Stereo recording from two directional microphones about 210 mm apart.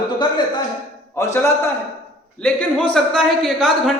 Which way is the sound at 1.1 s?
15° left (ahead or behind).